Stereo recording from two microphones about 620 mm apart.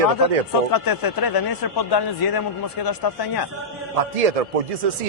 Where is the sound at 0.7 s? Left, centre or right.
Left.